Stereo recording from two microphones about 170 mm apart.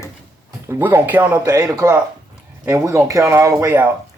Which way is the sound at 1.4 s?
20° right (ahead or behind).